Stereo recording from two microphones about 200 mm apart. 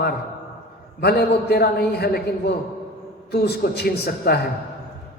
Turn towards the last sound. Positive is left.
turn(degrees=50)  # may be behind; listen again after turning